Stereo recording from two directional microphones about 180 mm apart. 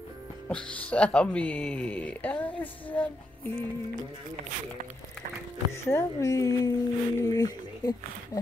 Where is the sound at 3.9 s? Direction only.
45° right (ahead or behind).